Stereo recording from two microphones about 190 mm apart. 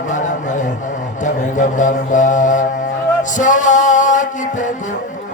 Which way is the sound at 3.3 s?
40° left (ahead or behind).